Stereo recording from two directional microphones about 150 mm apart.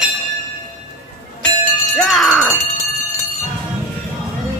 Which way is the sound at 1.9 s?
Centre (ahead or behind).